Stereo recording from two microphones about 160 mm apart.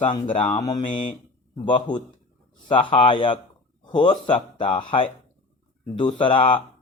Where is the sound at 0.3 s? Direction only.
40° left (ahead or behind).